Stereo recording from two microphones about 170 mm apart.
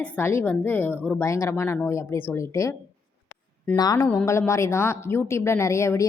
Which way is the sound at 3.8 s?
20° left (ahead or behind).